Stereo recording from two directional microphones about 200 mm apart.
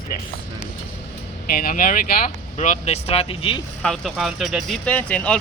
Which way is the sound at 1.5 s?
45° left (ahead or behind).